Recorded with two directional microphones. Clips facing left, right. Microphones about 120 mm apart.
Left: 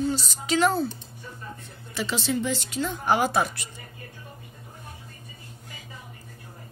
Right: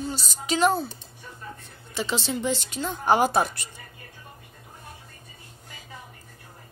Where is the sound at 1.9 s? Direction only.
25° right (ahead or behind).